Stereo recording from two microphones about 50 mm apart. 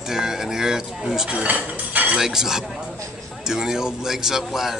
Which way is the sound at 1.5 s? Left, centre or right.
Right.